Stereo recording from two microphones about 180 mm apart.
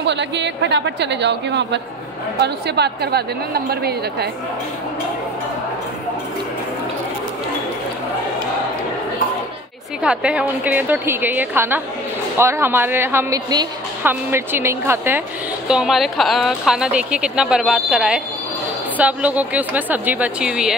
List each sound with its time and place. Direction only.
0.0 s a woman's voice: 75° right (ahead or behind)
10.0 s a woman's voice: 5° right (ahead or behind)
15.7 s a woman's voice: centre (ahead or behind)